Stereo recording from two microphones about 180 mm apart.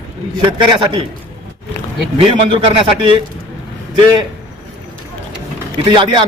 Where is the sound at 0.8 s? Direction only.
25° right (ahead or behind).